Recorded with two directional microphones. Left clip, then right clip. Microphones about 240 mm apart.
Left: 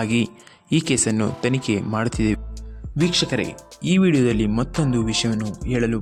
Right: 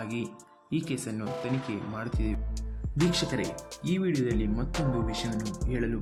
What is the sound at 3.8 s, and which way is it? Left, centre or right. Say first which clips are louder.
Speech: left 11 dB; left.